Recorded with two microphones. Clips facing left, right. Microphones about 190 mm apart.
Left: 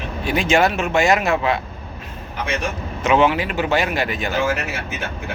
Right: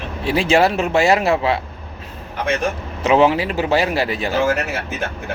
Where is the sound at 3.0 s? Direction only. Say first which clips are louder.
Right 2 dB; 35° right (ahead or behind).